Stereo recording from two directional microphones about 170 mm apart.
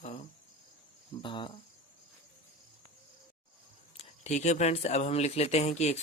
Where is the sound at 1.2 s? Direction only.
30° left (ahead or behind).